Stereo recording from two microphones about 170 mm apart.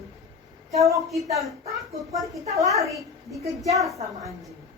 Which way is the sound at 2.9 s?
Centre (ahead or behind).